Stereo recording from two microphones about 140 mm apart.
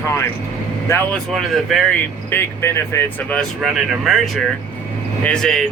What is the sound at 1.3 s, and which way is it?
Speech, centre (ahead or behind).